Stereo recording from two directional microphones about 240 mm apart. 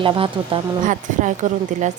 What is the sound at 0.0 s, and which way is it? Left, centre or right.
A woman's voice, right.